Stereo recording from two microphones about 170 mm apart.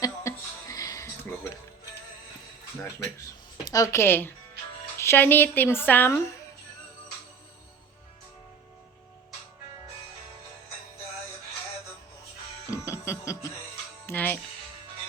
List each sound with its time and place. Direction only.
0.0 s music: 20° left (ahead or behind)
3.6 s speech: 20° left (ahead or behind)
12.7 s music: 15° left (ahead or behind)